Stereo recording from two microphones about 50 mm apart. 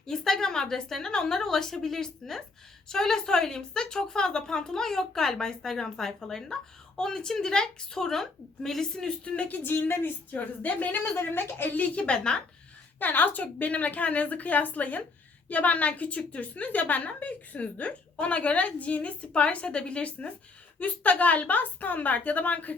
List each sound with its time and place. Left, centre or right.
0.1 s speech: centre
9.5 s a woman's voice: left
11.2 s a woman's voice: left
11.8 s a woman's voice: left
13.0 s a woman's voice: left